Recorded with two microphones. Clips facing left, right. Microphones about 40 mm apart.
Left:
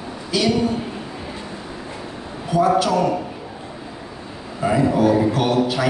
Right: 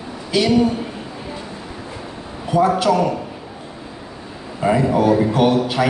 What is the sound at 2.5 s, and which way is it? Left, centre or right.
Speech, right.